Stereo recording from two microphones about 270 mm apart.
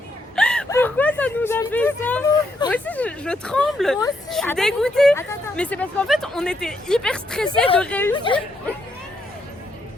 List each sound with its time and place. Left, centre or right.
0.3 s whimper: centre
2.6 s speech: centre
8.1 s speech: centre